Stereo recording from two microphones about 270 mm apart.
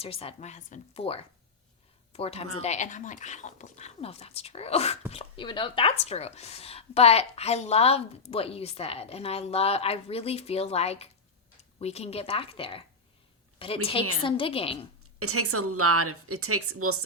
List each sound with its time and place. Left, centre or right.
0.0 s a woman's voice: left
15.2 s a woman's voice: right